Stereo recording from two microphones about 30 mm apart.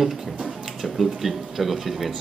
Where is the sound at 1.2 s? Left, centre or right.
Centre.